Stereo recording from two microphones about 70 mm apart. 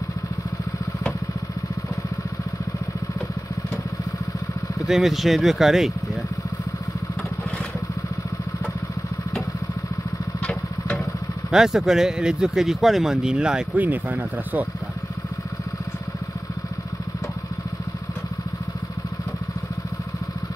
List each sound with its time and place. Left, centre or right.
4.8 s speech: centre
11.5 s speech: centre
13.7 s speech: right